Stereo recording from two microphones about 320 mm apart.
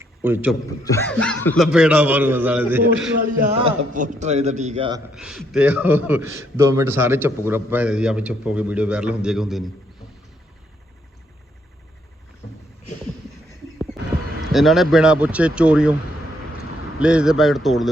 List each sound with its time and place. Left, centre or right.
0.0 s a sound: centre
0.9 s a man's voice: centre
3.6 s a man's voice: right
5.1 s a man's voice: centre
14.5 s a man's voice: centre
17.0 s a man's voice: centre